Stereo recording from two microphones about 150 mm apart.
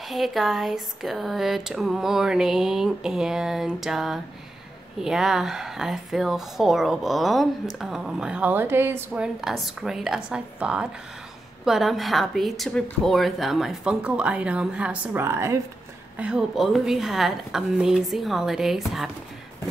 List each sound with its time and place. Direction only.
0.0 s speech: centre (ahead or behind); by 15.6 s 20° right (ahead or behind)
16.2 s speech: 5° right (ahead or behind)